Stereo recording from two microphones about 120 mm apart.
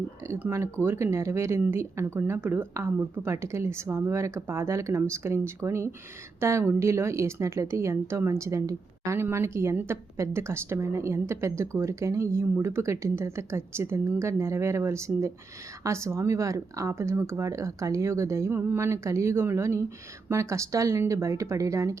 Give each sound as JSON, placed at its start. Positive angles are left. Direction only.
{"t": 0.3, "sound": "speech", "side_deg": -20}